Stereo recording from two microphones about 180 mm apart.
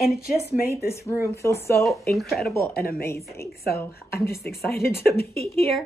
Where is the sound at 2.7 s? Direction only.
60° left (ahead or behind).